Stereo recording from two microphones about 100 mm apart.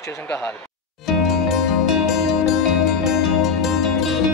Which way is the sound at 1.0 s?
Centre (ahead or behind).